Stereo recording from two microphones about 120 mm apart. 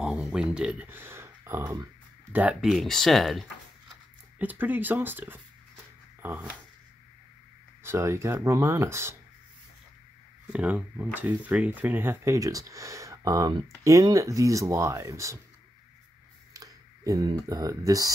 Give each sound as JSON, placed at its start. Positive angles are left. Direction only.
{"t": 0.0, "sound": "speech", "side_deg": -5}
{"t": 0.8, "sound": "speech", "side_deg": -20}
{"t": 2.6, "sound": "speech", "side_deg": 0}
{"t": 4.4, "sound": "speech", "side_deg": -15}
{"t": 7.8, "sound": "speech", "side_deg": -20}
{"t": 10.5, "sound": "speech", "side_deg": -10}
{"t": 16.5, "sound": "a sound", "side_deg": -30}
{"t": 17.3, "sound": "speech", "side_deg": -30}